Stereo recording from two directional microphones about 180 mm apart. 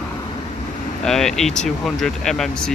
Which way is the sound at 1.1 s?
Centre (ahead or behind).